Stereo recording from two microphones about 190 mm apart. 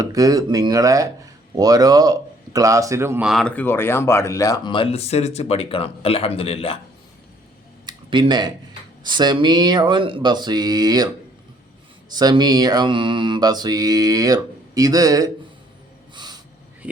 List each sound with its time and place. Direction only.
0.0 s mantra: 20° right (ahead or behind)
1.5 s speech: 20° right (ahead or behind); by 6.7 s 30° left (ahead or behind)
7.9 s a sound: 20° right (ahead or behind)
9.0 s mantra: 25° right (ahead or behind)
12.1 s mantra: 20° right (ahead or behind)
16.1 s snort: 20° right (ahead or behind)
16.8 s a sound: 10° right (ahead or behind)